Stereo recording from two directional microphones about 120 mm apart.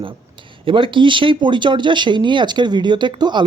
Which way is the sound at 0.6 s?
45° right (ahead or behind).